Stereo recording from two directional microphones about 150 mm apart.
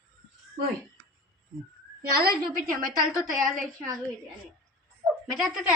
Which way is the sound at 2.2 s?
85° right.